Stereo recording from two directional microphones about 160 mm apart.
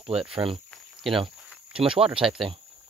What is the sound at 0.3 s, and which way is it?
Speech, 35° right (ahead or behind).